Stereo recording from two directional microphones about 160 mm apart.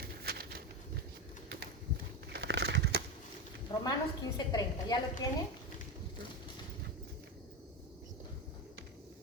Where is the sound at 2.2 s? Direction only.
90° right.